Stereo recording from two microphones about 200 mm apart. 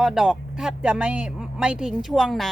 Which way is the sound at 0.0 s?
Centre (ahead or behind).